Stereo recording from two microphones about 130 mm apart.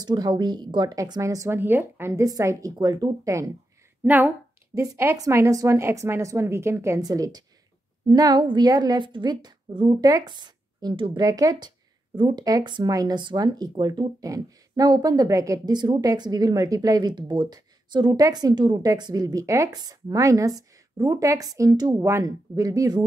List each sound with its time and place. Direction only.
0.0 s speech: 30° right (ahead or behind)
4.0 s a woman's voice: 15° right (ahead or behind); by 23.0 s 30° right (ahead or behind)